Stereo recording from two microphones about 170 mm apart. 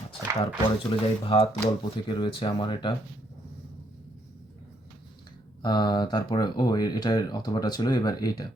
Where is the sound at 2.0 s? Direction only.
30° left (ahead or behind).